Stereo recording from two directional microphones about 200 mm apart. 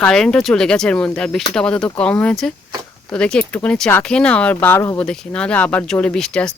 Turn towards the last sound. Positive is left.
turn(degrees=5)  # may be behind; listen again after turning